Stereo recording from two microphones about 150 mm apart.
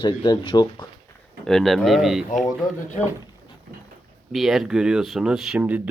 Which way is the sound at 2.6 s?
25° left (ahead or behind).